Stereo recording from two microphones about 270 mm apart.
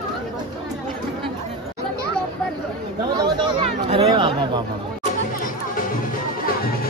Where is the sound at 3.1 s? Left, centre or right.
Centre.